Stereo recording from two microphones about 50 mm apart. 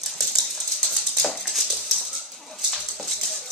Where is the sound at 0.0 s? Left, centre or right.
Centre.